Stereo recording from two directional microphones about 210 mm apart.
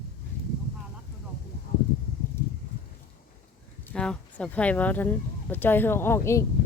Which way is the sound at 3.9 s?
5° left (ahead or behind).